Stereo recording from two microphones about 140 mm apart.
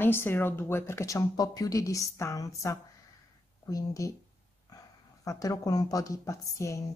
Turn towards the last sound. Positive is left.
turn(degrees=20)  # may be behind; listen again after turning